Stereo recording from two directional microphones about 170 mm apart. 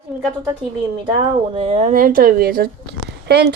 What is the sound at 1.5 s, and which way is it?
Speech, 35° right (ahead or behind).